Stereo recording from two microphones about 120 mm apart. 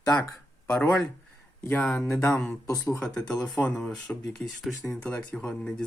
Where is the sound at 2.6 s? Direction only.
30° left (ahead or behind).